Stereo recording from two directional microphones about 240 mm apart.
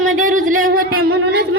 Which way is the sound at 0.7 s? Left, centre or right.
Right.